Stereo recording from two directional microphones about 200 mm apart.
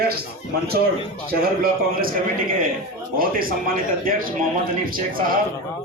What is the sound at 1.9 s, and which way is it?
Speech, 45° right (ahead or behind).